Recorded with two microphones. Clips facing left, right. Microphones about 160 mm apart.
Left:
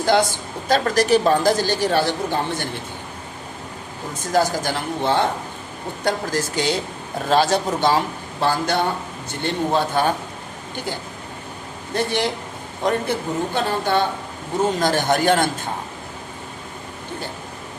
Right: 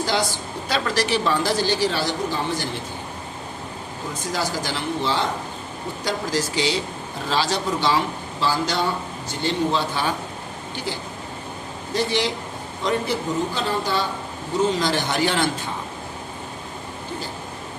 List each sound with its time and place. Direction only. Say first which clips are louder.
0.0 s a sound: left 6 dB; 55° left (ahead or behind)
0.7 s a woman's voice: left 6 dB; 45° left (ahead or behind)
4.3 s a woman's voice: left 7 dB; 50° left (ahead or behind)
11.9 s a woman's voice: left 1 dB; 55° left (ahead or behind)